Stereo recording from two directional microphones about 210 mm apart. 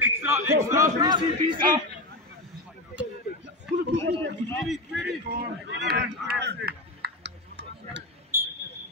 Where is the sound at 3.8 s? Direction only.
55° right (ahead or behind).